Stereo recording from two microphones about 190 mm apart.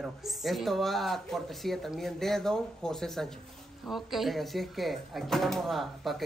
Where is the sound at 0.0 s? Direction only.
Centre (ahead or behind).